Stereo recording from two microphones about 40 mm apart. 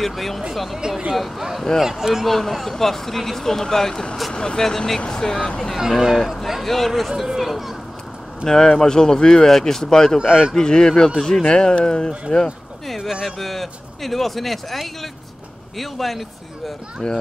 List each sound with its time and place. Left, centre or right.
0.0 s speech: centre
0.7 s speech: centre
2.2 s speech: centre
5.8 s speech: centre
6.9 s speech: centre
7.3 s children playing: centre
8.5 s speech: centre
10.1 s speech: centre
10.5 s speech: centre
12.8 s a sound: centre
13.4 s speech: centre
17.0 s speech: centre